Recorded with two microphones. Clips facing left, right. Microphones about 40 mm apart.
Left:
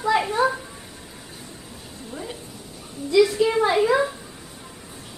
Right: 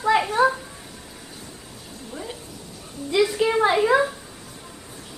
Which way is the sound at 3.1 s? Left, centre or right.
Right.